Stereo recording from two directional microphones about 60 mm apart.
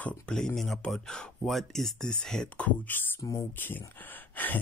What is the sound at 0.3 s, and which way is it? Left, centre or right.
Speech, centre.